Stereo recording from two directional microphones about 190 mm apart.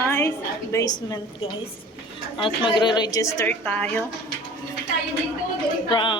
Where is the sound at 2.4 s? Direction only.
25° left (ahead or behind).